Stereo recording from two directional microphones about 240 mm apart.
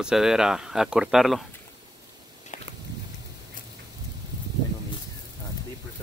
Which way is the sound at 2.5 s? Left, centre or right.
Left.